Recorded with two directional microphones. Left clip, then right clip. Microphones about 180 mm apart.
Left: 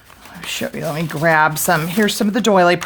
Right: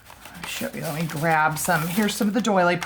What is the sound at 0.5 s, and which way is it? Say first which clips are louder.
Speech: left 7 dB; 55° left (ahead or behind).